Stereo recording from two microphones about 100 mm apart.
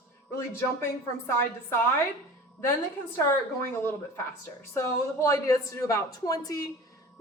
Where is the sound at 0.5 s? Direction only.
25° left (ahead or behind).